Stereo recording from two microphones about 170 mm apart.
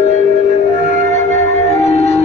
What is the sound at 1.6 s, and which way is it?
Music, 40° left (ahead or behind).